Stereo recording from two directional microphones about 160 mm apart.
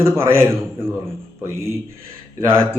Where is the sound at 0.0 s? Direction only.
15° right (ahead or behind).